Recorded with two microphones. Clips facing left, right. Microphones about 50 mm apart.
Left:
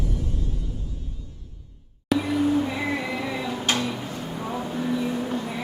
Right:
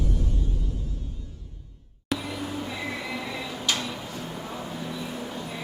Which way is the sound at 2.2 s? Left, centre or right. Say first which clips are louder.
Left 11 dB; left.